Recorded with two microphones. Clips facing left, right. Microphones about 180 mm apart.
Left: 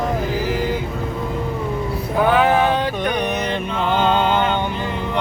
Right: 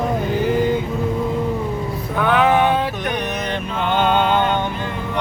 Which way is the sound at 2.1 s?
40° left (ahead or behind).